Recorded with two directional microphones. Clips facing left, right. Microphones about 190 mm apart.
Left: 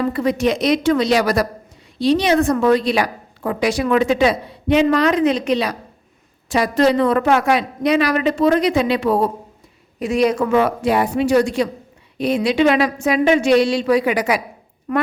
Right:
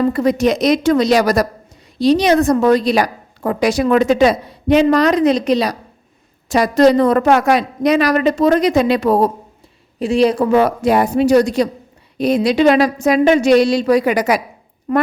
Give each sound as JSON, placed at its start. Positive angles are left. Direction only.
{"t": 0.1, "sound": "a woman's voice", "side_deg": -40}
{"t": 10.0, "sound": "a woman's voice", "side_deg": -30}
{"t": 14.9, "sound": "a woman's voice", "side_deg": -30}